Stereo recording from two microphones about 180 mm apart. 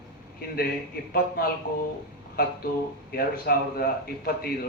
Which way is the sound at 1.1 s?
55° left (ahead or behind).